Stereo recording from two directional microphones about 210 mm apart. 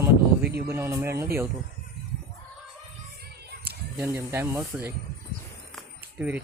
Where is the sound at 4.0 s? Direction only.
10° right (ahead or behind).